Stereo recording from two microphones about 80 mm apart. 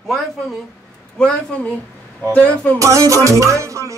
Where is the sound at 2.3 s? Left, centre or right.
Centre.